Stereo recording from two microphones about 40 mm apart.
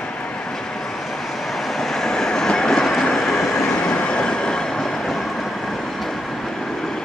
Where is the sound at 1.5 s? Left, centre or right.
Centre.